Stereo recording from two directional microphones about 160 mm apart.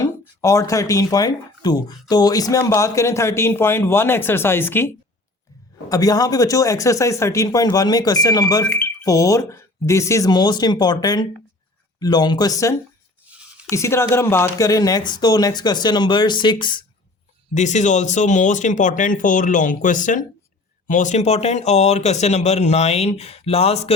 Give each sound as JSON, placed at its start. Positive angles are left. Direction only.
{"t": 0.0, "sound": "speech", "side_deg": 20}
{"t": 5.9, "sound": "speech", "side_deg": 25}
{"t": 8.6, "sound": "speech", "side_deg": 10}
{"t": 9.0, "sound": "speech", "side_deg": 20}
{"t": 17.5, "sound": "speech", "side_deg": 50}